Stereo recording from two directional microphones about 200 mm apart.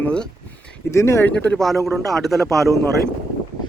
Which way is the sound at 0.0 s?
5° left (ahead or behind).